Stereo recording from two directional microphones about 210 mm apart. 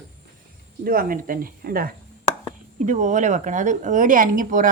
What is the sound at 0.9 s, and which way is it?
A woman's voice, 45° right (ahead or behind).